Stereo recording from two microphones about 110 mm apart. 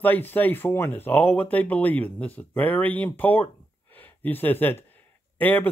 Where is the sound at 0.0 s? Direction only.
15° left (ahead or behind).